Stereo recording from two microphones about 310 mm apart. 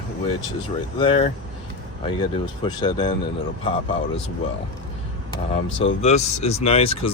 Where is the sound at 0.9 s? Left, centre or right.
Centre.